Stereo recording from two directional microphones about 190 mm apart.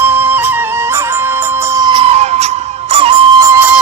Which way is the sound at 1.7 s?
20° right (ahead or behind).